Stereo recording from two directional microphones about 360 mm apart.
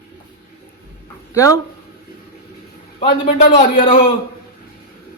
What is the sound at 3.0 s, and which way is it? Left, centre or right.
Speech, centre.